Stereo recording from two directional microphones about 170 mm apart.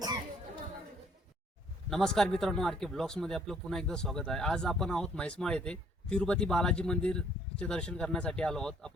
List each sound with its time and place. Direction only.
1.9 s speech: centre (ahead or behind)